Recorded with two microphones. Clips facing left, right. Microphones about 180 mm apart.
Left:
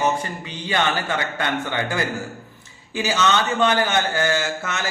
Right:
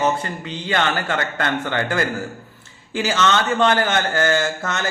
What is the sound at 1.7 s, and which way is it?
A man's voice, 15° left (ahead or behind).